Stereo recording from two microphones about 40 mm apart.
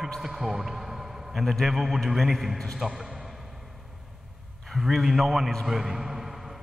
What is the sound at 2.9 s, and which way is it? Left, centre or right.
Speech, centre.